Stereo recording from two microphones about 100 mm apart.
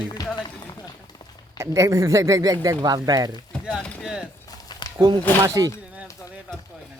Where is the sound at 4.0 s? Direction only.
5° right (ahead or behind).